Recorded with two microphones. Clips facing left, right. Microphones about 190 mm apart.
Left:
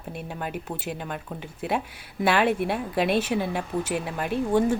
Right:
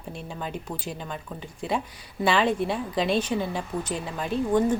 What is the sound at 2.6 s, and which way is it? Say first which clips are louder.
Speech: left 1 dB; 60° left (ahead or behind).